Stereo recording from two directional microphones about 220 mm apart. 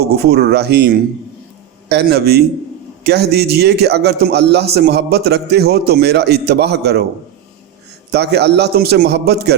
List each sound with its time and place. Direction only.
0.0 s a man's voice: 45° right (ahead or behind)
8.1 s a man's voice: 50° right (ahead or behind)